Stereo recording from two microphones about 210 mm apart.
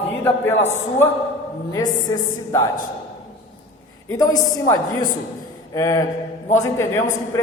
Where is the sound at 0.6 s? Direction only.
10° left (ahead or behind).